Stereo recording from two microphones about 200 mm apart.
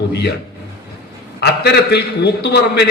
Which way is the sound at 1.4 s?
55° left (ahead or behind).